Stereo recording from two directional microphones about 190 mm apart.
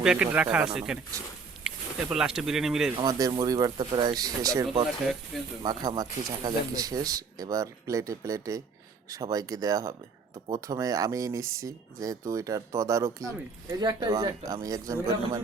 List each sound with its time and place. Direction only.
0.0 s speech: 5° right (ahead or behind)
3.0 s speech: 20° right (ahead or behind)
5.3 s speech: centre (ahead or behind)
5.6 s speech: 20° right (ahead or behind)